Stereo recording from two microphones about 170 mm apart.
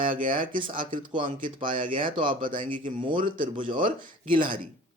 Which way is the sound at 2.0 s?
30° right (ahead or behind).